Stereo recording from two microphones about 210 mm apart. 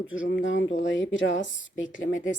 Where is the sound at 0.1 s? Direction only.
60° left (ahead or behind).